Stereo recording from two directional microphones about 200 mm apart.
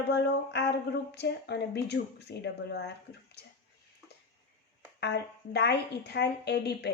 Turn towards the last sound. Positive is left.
turn(degrees=55)  # may be behind; listen again after turning